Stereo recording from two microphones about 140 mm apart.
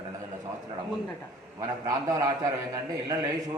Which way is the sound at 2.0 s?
25° right (ahead or behind).